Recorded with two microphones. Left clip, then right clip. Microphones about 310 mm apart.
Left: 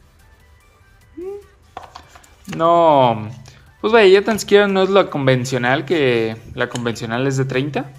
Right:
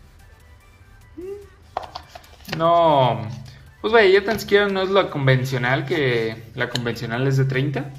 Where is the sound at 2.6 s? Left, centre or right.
Left.